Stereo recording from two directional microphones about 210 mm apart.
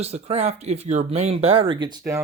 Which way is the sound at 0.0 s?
30° right (ahead or behind).